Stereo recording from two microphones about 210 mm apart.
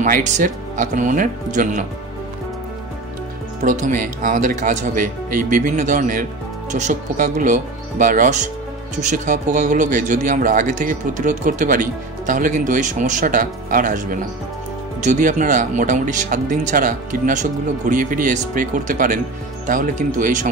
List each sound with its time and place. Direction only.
0.0 s speech: 35° right (ahead or behind)
3.6 s speech: 35° right (ahead or behind)
15.0 s speech: 40° right (ahead or behind)